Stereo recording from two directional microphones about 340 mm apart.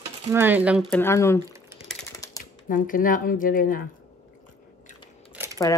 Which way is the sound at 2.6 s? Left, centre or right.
Left.